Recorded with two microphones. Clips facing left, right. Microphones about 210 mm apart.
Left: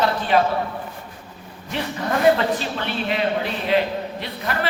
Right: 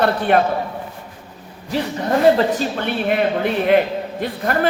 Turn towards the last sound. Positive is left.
turn(degrees=-50)  # may be behind; listen again after turning